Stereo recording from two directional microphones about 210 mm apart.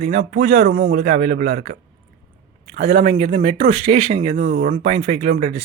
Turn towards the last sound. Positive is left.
turn(degrees=-35)  # may be behind; listen again after turning